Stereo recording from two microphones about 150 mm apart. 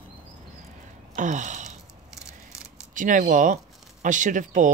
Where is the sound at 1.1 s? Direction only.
55° right (ahead or behind).